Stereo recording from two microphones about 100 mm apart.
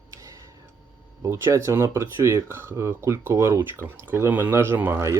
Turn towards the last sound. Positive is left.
turn(degrees=-25)  # may be behind; listen again after turning